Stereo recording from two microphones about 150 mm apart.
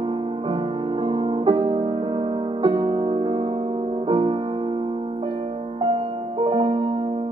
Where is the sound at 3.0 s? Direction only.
40° right (ahead or behind).